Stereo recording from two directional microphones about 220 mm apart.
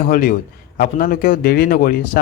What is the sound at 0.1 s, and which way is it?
A man's voice, 40° left (ahead or behind).